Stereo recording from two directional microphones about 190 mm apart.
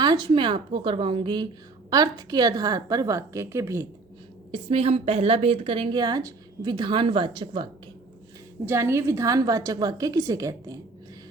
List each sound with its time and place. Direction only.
0.0 s a woman's voice: 25° right (ahead or behind)
4.5 s a woman's voice: 30° right (ahead or behind)
8.6 s a woman's voice: 15° right (ahead or behind)